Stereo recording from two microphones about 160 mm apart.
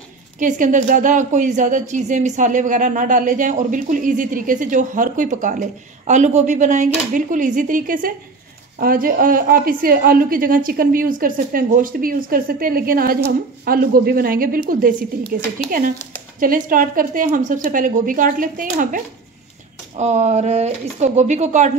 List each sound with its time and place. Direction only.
0.4 s a woman's voice: 55° right (ahead or behind)
16.3 s a woman's voice: 60° right (ahead or behind)
20.0 s speech: 45° right (ahead or behind)